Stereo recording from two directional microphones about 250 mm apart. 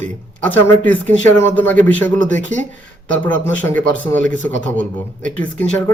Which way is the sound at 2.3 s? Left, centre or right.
Right.